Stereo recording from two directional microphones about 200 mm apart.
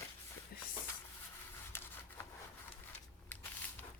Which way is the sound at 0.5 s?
50° left (ahead or behind).